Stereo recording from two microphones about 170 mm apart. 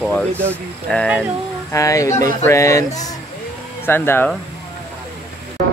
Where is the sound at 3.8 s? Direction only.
15° left (ahead or behind).